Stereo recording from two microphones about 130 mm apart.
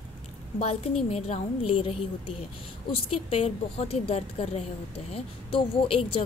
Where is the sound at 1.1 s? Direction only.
50° left (ahead or behind).